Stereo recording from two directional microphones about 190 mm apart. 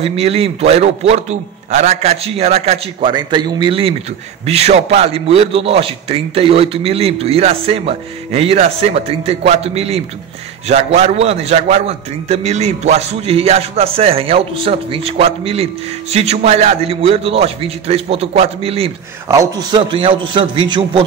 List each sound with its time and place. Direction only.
0.0 s a man's voice: 30° right (ahead or behind)
19.2 s a man's voice: 20° right (ahead or behind)